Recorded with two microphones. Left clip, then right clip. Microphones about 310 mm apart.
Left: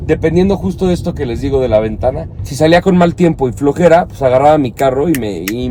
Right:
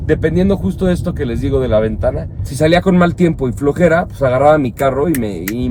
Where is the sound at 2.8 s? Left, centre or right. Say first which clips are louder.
Left 2 dB; left.